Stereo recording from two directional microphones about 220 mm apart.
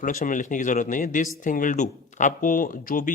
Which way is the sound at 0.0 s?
35° left (ahead or behind).